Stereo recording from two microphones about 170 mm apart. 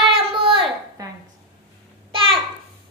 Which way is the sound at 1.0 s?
20° right (ahead or behind).